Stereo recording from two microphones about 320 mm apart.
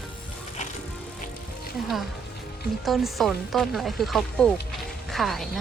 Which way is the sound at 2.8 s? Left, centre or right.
Centre.